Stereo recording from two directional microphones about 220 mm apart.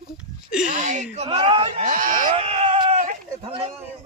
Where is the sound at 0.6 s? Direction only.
35° right (ahead or behind).